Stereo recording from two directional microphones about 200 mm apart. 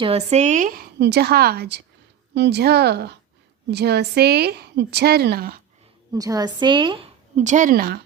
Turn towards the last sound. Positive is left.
turn(degrees=-45)  # may be behind; listen again after turning